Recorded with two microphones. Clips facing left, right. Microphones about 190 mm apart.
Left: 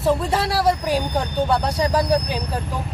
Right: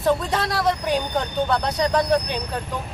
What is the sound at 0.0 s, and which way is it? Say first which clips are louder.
Speech: left 1 dB; 5° left (ahead or behind).